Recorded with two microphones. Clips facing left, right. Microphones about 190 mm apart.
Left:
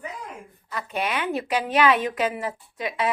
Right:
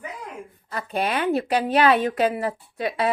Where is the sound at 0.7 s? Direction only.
35° right (ahead or behind).